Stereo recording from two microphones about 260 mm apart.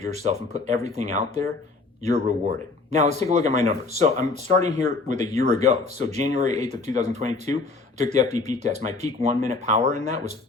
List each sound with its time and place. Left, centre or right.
0.0 s speech: right